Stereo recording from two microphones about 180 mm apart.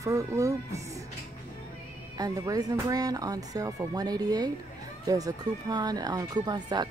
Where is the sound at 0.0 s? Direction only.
15° right (ahead or behind).